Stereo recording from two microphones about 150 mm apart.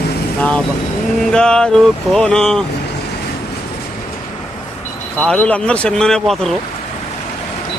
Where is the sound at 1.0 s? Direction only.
5° left (ahead or behind).